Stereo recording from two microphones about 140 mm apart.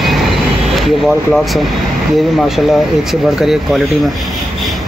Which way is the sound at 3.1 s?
5° right (ahead or behind).